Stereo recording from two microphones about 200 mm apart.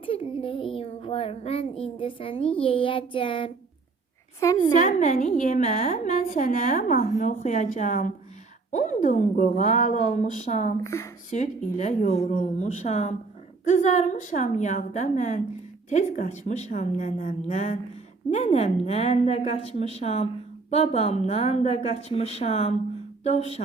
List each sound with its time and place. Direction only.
0.0 s a child's voice: 25° left (ahead or behind)
4.4 s speech: 15° left (ahead or behind)
4.8 s a woman's voice: 40° left (ahead or behind)
10.8 s speech: 15° left (ahead or behind)
11.3 s a woman's voice: 35° left (ahead or behind)